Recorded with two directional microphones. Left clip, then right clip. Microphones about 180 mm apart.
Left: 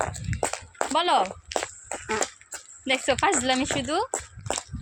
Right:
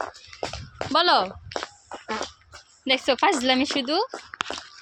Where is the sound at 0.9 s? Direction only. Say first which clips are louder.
Right 3 dB; 25° right (ahead or behind).